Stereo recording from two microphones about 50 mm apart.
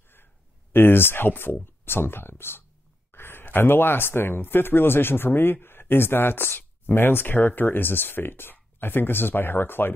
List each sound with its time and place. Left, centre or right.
0.7 s speech: left